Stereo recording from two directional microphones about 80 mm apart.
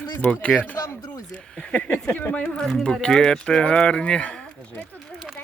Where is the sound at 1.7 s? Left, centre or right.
Centre.